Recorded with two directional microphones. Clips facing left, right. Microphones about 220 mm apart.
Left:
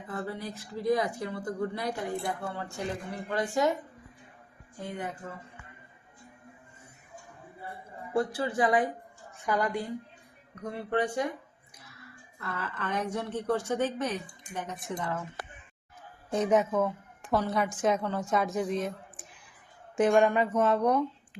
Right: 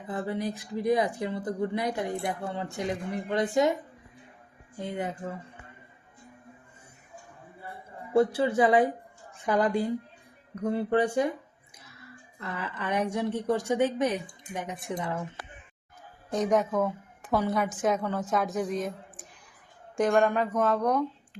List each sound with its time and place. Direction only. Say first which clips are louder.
0.1 s speech: right 5 dB; 20° right (ahead or behind)
4.8 s speech: right 4 dB; 20° right (ahead or behind)
8.1 s speech: right 6 dB; 25° right (ahead or behind)
10.6 s speech: right 5 dB; 30° right (ahead or behind); by 15.2 s 15° right (ahead or behind)
16.3 s a woman's voice: even; 5° left (ahead or behind)
20.0 s speech: left 1 dB; 5° left (ahead or behind)